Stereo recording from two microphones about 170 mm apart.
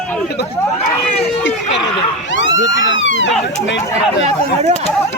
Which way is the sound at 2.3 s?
90° left.